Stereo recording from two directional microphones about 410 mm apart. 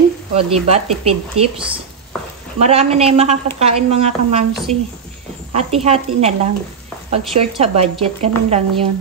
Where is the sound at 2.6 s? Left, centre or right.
Centre.